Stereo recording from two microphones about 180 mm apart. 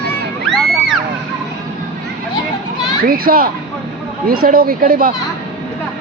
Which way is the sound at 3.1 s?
55° right (ahead or behind).